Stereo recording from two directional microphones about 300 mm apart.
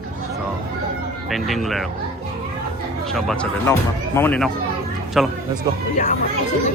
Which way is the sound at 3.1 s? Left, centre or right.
Centre.